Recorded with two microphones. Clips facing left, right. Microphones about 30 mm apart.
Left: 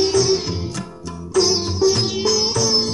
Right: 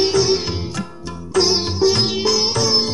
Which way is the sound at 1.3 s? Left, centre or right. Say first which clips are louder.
Right 1 dB; right.